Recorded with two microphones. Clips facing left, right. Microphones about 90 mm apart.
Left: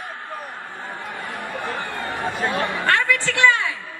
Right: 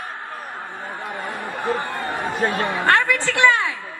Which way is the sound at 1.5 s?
20° right (ahead or behind).